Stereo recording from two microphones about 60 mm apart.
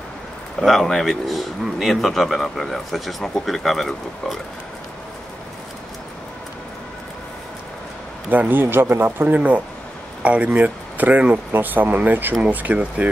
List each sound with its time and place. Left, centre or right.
0.6 s speech: centre
8.3 s speech: right
9.3 s speech: right